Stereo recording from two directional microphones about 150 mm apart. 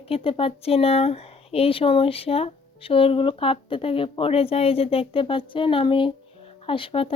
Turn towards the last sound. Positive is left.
turn(degrees=35)  # may be behind; listen again after turning